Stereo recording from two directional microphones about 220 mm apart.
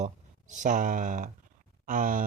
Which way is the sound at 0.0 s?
35° right (ahead or behind).